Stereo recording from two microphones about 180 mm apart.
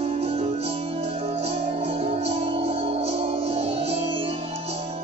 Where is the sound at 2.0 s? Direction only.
35° right (ahead or behind).